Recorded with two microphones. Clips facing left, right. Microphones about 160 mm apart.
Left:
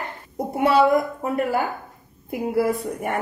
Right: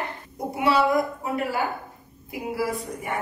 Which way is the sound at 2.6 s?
55° left (ahead or behind).